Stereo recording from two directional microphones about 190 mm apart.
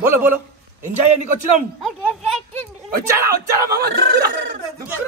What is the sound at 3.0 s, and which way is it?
Speech, 15° right (ahead or behind).